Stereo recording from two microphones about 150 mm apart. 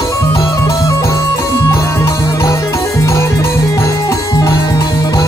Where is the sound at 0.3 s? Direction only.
20° left (ahead or behind).